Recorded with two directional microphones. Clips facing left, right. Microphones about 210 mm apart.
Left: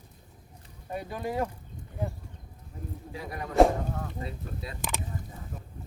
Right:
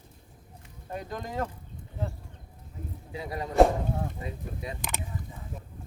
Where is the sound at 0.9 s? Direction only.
10° left (ahead or behind).